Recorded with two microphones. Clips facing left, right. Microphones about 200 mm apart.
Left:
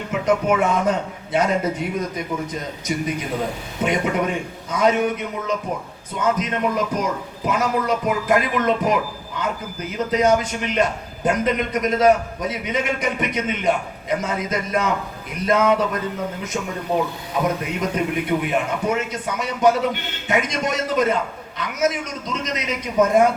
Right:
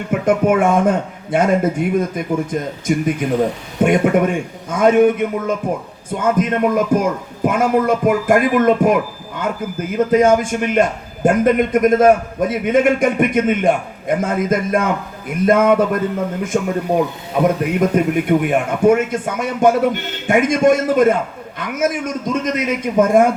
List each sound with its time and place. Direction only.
0.1 s a man's voice: 50° right (ahead or behind)
17.7 s a man's voice: 50° right (ahead or behind)